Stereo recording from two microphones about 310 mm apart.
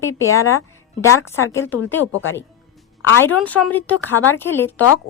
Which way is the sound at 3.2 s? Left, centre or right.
Centre.